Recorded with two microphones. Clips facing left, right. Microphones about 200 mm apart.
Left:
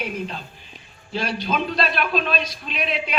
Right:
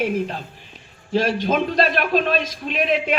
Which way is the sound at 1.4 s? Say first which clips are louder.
Right 4 dB; 50° right (ahead or behind).